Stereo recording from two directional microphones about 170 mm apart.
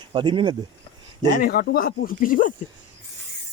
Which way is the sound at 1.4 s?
70° left (ahead or behind).